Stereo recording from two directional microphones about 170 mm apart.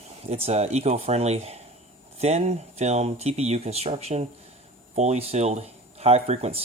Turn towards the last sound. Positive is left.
turn(degrees=-35)  # may be behind; listen again after turning